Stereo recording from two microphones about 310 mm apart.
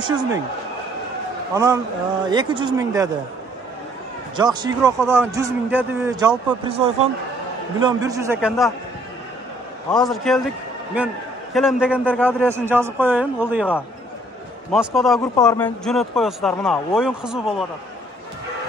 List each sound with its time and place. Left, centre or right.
0.0 s a man's voice: centre
1.5 s a man's voice: centre
4.4 s a man's voice: centre
6.7 s a man's voice: centre
9.8 s speech: centre
11.5 s a man's voice: centre
14.7 s speech: centre
15.1 s speech: centre